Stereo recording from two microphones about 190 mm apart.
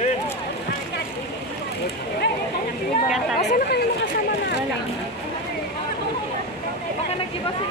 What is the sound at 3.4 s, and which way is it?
Speech, 60° left (ahead or behind).